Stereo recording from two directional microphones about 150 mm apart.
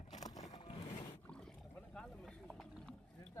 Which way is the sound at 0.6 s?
40° left (ahead or behind).